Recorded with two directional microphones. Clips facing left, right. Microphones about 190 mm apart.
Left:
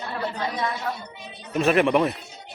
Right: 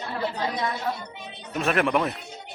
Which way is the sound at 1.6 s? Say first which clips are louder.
Left 4 dB; centre (ahead or behind).